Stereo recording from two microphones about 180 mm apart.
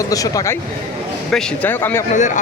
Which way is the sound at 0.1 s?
20° left (ahead or behind).